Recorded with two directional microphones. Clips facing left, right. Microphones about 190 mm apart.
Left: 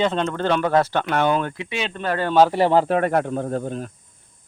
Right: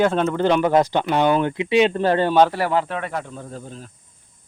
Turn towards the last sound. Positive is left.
turn(degrees=60)  # may be behind; listen again after turning